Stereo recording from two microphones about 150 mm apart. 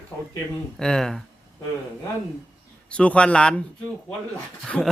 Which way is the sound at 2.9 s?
10° left (ahead or behind).